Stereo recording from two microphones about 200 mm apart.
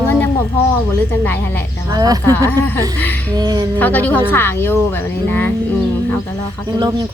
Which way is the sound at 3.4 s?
20° right (ahead or behind).